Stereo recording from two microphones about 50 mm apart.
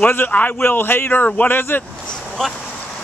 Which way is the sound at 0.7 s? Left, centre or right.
Left.